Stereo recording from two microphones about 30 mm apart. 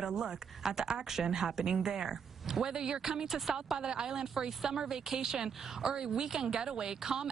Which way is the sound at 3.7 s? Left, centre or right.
Right.